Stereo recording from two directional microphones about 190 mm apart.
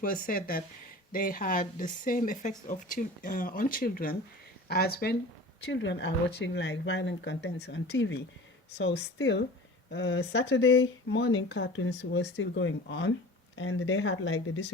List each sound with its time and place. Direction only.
0.0 s speech: 50° left (ahead or behind)
5.7 s speech: 70° left (ahead or behind)
13.6 s speech: 90° left